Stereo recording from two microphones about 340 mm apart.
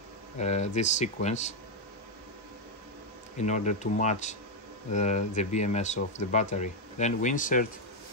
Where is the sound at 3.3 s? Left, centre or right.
Left.